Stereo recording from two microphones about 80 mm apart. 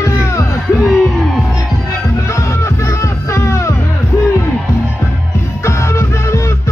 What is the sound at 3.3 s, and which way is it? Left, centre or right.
Music, left.